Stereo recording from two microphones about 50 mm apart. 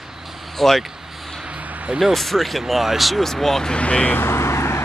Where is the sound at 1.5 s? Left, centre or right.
Right.